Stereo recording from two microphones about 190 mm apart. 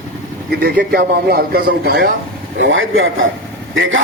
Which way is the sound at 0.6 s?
50° right (ahead or behind).